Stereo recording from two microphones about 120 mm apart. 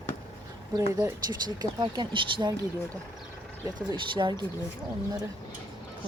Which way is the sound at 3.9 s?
40° right (ahead or behind).